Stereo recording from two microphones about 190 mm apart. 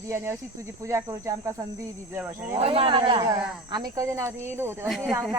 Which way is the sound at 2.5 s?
30° right (ahead or behind).